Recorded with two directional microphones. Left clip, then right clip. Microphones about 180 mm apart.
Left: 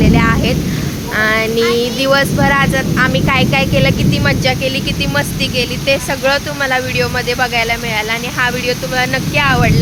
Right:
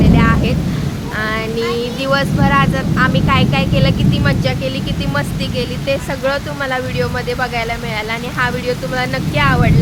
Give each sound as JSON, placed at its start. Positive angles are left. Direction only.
{"t": 0.0, "sound": "a sound", "side_deg": 15}
{"t": 1.1, "sound": "speech", "side_deg": 25}
{"t": 5.1, "sound": "speech", "side_deg": 0}